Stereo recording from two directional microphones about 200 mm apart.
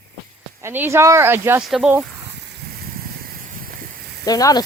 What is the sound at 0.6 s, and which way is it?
Speech, 10° right (ahead or behind).